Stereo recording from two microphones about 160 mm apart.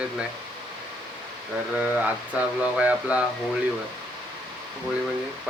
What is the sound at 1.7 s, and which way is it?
Speech, 10° right (ahead or behind).